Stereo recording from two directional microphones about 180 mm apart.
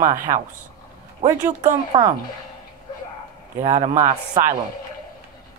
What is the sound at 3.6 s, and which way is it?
Speech, 40° right (ahead or behind).